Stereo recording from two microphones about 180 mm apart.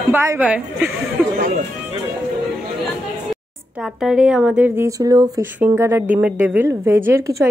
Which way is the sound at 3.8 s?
Centre (ahead or behind).